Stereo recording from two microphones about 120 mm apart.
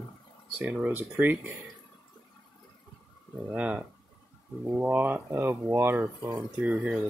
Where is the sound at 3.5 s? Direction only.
10° right (ahead or behind).